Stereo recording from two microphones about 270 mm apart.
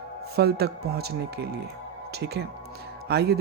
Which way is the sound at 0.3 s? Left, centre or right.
Right.